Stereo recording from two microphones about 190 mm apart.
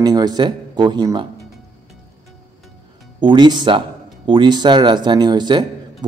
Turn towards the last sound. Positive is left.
turn(degrees=-25)  # may be behind; listen again after turning